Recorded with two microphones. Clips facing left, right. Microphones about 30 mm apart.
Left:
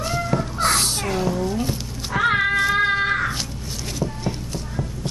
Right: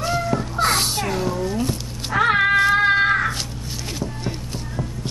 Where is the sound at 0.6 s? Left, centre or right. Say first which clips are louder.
Right 2 dB; centre.